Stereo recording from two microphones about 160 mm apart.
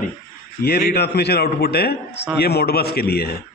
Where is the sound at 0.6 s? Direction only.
75° left (ahead or behind).